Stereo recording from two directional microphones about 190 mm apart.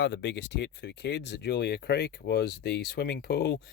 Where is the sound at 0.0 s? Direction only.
70° left (ahead or behind).